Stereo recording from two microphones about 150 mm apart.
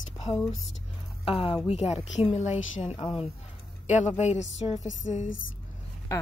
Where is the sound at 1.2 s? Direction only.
35° left (ahead or behind).